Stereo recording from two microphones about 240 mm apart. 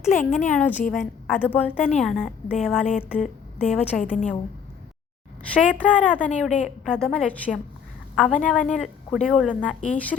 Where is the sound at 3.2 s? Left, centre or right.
Left.